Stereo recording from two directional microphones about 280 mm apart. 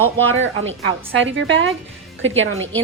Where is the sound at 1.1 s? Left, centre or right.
Right.